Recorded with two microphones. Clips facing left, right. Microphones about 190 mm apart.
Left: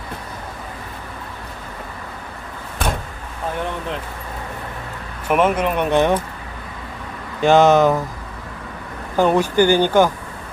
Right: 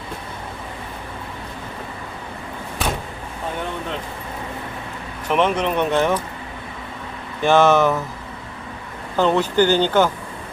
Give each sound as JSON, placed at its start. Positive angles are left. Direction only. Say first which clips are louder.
{"t": 5.3, "sound": "speech", "louder": "left 2 dB", "side_deg": 10}
{"t": 7.4, "sound": "speech", "louder": "left 2 dB", "side_deg": 15}
{"t": 9.1, "sound": "speech", "louder": "left 2 dB", "side_deg": 15}